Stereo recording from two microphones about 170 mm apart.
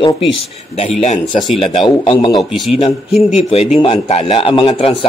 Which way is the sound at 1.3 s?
Centre (ahead or behind).